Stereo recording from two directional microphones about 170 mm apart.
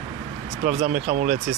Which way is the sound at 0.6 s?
45° right (ahead or behind).